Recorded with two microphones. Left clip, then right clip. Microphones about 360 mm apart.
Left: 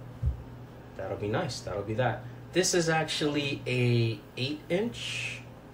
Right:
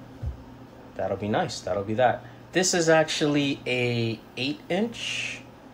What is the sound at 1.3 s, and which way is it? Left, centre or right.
Speech, right.